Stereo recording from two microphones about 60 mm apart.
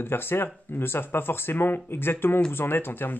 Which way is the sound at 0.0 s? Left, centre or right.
Left.